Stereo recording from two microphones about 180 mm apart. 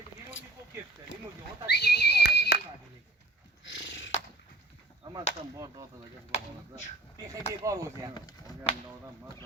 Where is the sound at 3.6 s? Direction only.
85° left.